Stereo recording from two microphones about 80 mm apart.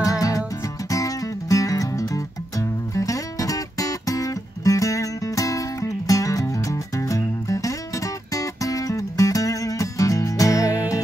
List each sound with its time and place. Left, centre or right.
0.0 s music: left